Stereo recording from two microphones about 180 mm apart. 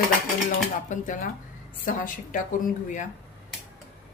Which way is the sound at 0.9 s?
45° left (ahead or behind).